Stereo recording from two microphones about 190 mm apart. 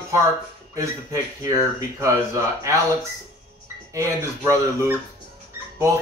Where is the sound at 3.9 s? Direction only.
15° right (ahead or behind).